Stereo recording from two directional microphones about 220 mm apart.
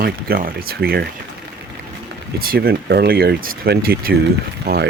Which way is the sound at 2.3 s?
45° right (ahead or behind).